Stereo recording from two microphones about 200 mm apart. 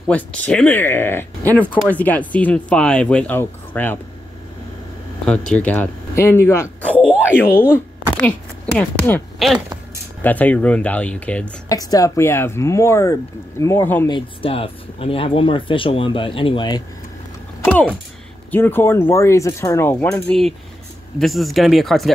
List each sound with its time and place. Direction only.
0.1 s speech: 5° left (ahead or behind)
5.2 s speech: 5° left (ahead or behind)
11.7 s speech: 20° left (ahead or behind)
14.0 s speech: 25° left (ahead or behind)
18.5 s speech: 10° left (ahead or behind)